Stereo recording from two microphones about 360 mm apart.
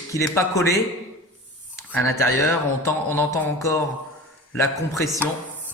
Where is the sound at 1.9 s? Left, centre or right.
Centre.